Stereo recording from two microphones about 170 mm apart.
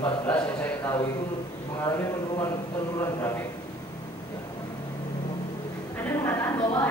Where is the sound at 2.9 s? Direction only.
20° left (ahead or behind).